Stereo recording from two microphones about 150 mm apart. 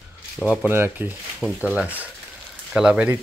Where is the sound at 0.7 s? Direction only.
15° right (ahead or behind).